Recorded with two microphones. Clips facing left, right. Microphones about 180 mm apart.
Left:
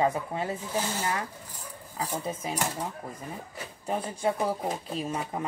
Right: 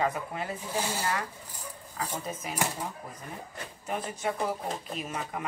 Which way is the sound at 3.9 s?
30° left (ahead or behind).